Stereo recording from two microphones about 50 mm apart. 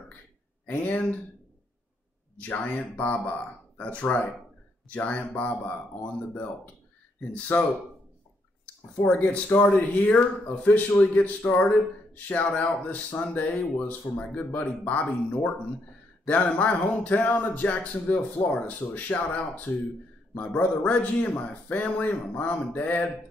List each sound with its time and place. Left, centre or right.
0.8 s speech: left
2.3 s speech: left
9.2 s speech: left
12.4 s speech: centre
12.8 s speech: left
16.5 s speech: left
22.6 s mantra: left